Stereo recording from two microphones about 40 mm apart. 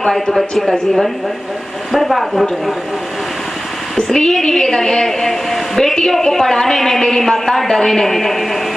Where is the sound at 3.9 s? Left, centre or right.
Centre.